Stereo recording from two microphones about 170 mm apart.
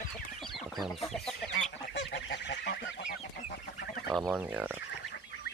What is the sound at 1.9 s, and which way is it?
Goose, 90° left.